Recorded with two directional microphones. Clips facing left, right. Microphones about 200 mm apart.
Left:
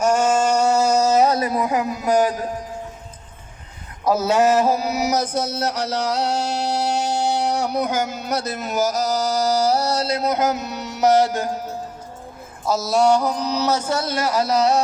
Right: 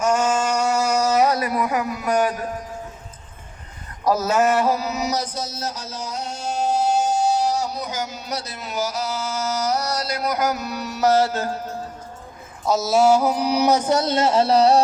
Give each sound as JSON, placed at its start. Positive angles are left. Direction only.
{"t": 0.0, "sound": "a sound", "side_deg": 30}
{"t": 4.0, "sound": "speech", "side_deg": 10}
{"t": 4.6, "sound": "mantra", "side_deg": 25}
{"t": 5.1, "sound": "music", "side_deg": 55}
{"t": 12.6, "sound": "mantra", "side_deg": 0}